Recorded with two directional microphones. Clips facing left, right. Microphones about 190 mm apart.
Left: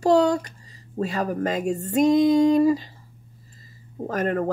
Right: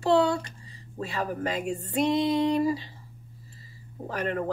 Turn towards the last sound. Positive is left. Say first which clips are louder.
# left 5 dB
turn(degrees=45)  # may be behind; listen again after turning